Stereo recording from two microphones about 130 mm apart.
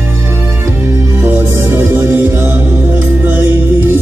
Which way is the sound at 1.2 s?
15° right (ahead or behind).